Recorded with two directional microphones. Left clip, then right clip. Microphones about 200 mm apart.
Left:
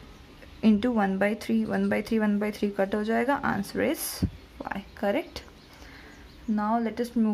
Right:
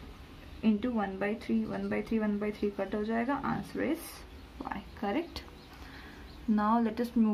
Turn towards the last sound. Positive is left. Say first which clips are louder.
# left 3 dB
turn(degrees=20)  # may be behind; listen again after turning